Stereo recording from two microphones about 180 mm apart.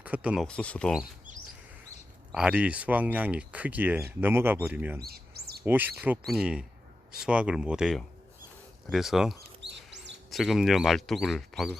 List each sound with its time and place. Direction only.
0.0 s speech: 5° right (ahead or behind)
0.4 s speech: 5° left (ahead or behind)
1.3 s chirp: 45° right (ahead or behind)
2.3 s speech: 5° right (ahead or behind)
4.9 s bird: 60° right (ahead or behind)
5.6 s speech: 10° right (ahead or behind)